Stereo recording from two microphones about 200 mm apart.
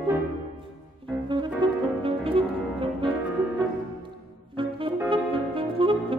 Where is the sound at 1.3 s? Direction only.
25° right (ahead or behind).